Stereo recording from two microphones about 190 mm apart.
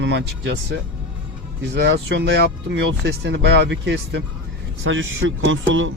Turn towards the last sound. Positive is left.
turn(degrees=-90)